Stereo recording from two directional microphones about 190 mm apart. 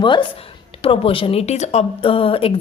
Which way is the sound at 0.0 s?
25° left (ahead or behind).